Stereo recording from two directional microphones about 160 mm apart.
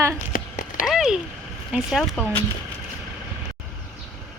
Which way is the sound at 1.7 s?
Centre (ahead or behind).